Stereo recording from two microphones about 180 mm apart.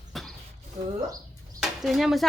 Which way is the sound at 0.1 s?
Centre (ahead or behind).